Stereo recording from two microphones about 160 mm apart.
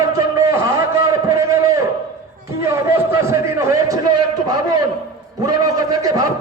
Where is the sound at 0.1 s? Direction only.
20° right (ahead or behind).